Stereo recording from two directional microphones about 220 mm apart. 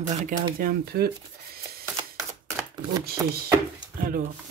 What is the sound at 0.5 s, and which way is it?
Speech, 40° right (ahead or behind).